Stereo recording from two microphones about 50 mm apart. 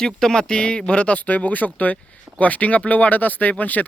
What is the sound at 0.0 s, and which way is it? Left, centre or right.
Speech, centre.